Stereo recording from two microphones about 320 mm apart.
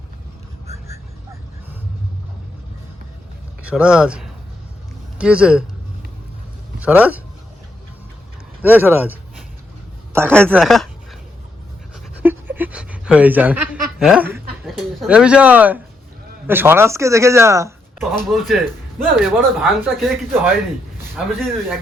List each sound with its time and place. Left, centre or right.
3.6 s speech: centre
6.7 s speech: centre
8.6 s speech: centre
10.1 s a sound: centre
12.2 s pant: centre
14.6 s speech: centre